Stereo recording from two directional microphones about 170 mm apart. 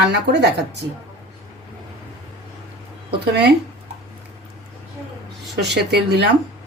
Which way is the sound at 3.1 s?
80° right.